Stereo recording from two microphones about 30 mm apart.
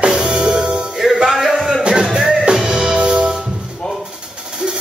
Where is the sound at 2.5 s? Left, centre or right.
Right.